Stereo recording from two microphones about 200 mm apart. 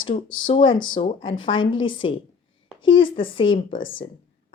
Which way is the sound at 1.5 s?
75° left (ahead or behind).